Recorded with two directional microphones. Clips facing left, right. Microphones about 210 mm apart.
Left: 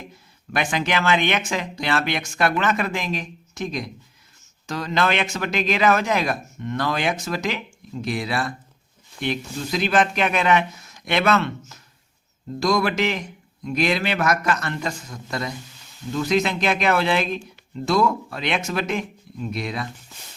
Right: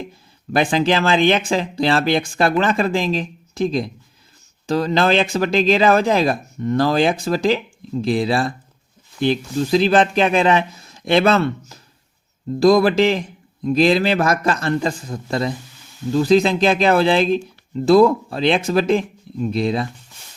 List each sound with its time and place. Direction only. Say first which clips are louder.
0.5 s speech: right 7 dB; 30° right (ahead or behind)